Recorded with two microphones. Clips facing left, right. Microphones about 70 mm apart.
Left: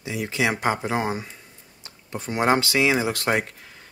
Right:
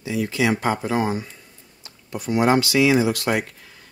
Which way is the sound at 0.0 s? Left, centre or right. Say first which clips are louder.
Right 3 dB; left.